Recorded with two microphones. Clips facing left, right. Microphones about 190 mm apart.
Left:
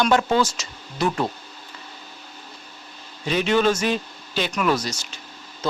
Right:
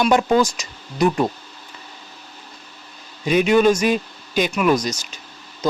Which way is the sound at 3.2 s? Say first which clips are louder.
Right 5 dB; 10° right (ahead or behind).